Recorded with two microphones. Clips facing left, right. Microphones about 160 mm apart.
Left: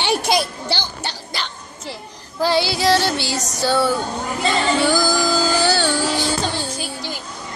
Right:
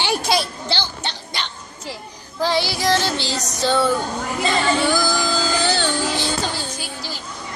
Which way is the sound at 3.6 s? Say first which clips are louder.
Even; 10° left (ahead or behind).